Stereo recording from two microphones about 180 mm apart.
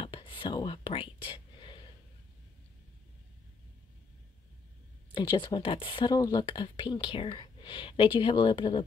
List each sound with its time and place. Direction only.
0.0 s whispering: 30° left (ahead or behind)
5.1 s speech: 25° left (ahead or behind)